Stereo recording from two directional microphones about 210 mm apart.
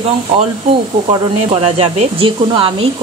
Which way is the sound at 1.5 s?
30° right (ahead or behind).